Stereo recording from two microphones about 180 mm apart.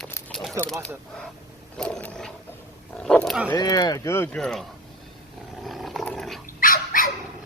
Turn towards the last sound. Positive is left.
turn(degrees=50)  # may be behind; listen again after turning